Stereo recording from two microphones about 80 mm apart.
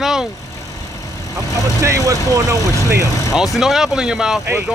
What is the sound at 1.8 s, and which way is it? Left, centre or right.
Speech, right.